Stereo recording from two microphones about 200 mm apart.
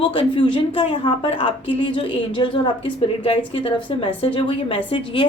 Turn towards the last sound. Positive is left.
turn(degrees=25)  # may be behind; listen again after turning